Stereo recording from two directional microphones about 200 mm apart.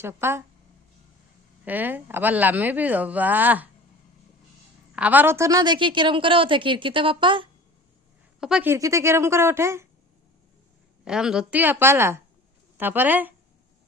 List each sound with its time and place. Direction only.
0.0 s speech: 10° right (ahead or behind)
1.6 s speech: 10° right (ahead or behind)
4.9 s a woman's voice: 10° right (ahead or behind); by 7.4 s 25° right (ahead or behind)
8.4 s speech: 5° right (ahead or behind)
11.0 s speech: 5° right (ahead or behind)